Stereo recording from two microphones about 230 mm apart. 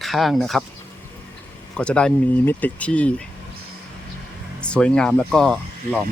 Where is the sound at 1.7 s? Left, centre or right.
Centre.